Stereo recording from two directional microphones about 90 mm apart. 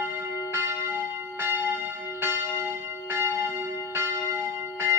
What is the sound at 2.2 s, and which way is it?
Church bell, 25° right (ahead or behind).